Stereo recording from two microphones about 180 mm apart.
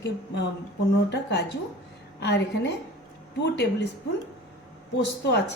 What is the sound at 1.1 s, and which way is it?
A woman's voice, 70° left (ahead or behind).